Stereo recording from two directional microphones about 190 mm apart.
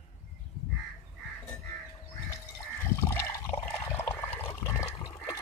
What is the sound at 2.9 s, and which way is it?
Water, 15° left (ahead or behind).